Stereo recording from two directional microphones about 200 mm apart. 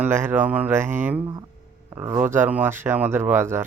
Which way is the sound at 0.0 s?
10° right (ahead or behind).